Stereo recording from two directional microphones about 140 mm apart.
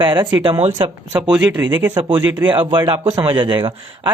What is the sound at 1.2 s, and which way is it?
Speech, 10° right (ahead or behind).